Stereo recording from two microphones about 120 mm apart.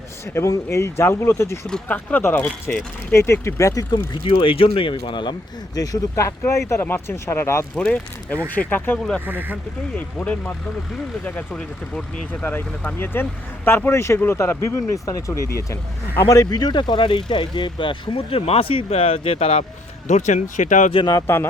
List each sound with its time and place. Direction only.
0.3 s speech: 25° left (ahead or behind)
1.6 s speech: 10° left (ahead or behind); by 3.8 s 25° left (ahead or behind)
3.9 s speech: 50° left (ahead or behind); by 7.7 s 20° left (ahead or behind)
7.8 s speech: 10° left (ahead or behind)
9.2 s speech: 15° right (ahead or behind)
10.2 s speech: 10° left (ahead or behind); by 19.6 s 55° left (ahead or behind)
20.1 s speech: 80° left
20.9 s speech: 40° left (ahead or behind)
21.2 s speech: 20° left (ahead or behind)